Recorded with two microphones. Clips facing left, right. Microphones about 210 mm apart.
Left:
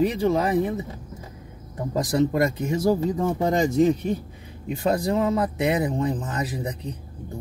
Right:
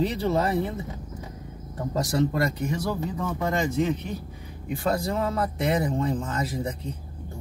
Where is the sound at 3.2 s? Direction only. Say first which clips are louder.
Left 5 dB; 30° left (ahead or behind).